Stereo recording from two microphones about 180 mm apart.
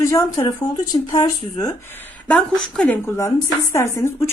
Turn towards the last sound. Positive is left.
turn(degrees=15)  # may be behind; listen again after turning